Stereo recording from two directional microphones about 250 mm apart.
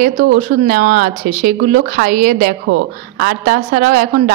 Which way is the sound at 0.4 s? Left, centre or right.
Right.